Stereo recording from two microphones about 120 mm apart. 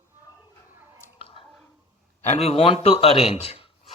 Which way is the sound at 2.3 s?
60° left (ahead or behind).